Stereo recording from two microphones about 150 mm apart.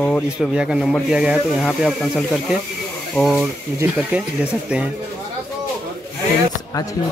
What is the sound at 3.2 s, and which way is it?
Speech, centre (ahead or behind).